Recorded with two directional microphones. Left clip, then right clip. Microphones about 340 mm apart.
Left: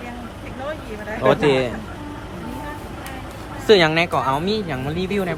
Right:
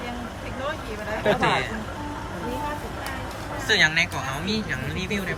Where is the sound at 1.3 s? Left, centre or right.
Centre.